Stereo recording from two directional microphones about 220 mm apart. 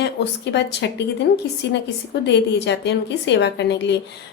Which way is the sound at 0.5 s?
50° left (ahead or behind).